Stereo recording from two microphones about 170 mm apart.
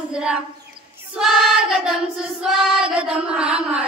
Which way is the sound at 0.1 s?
5° right (ahead or behind).